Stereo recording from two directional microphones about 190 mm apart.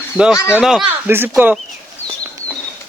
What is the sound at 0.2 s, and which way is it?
Speech, 5° right (ahead or behind).